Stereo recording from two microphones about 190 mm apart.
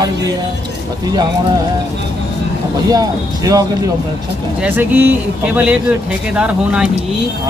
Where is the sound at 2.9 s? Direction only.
20° right (ahead or behind).